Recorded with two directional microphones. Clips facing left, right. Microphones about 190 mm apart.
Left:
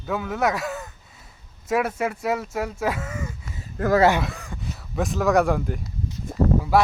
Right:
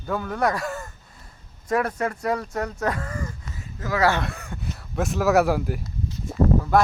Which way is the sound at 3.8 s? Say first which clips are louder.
Left 9 dB; 60° left (ahead or behind).